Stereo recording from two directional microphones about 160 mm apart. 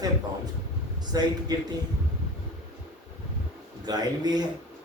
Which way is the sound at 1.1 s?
25° right (ahead or behind).